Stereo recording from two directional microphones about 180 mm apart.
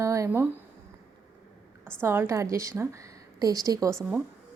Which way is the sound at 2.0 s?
10° right (ahead or behind).